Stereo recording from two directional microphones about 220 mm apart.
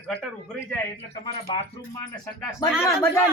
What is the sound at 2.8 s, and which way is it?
Speech, 10° left (ahead or behind).